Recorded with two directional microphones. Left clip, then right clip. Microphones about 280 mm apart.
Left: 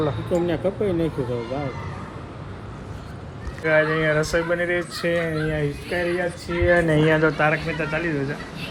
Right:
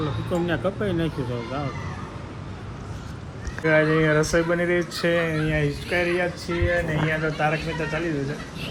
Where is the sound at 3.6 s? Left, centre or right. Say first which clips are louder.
Even; right.